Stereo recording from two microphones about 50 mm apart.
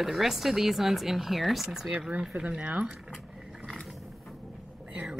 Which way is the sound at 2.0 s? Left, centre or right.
Right.